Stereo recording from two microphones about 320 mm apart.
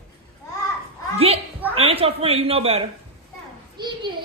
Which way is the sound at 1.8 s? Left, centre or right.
Centre.